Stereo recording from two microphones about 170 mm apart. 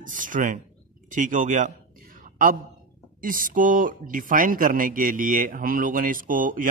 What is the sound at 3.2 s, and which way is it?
Speech, 55° right (ahead or behind).